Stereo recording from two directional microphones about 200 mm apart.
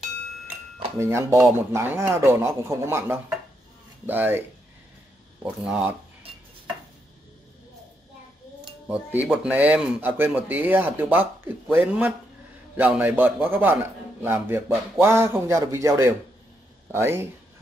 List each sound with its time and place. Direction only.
0.9 s speech: 15° right (ahead or behind)
8.8 s speech: 10° right (ahead or behind)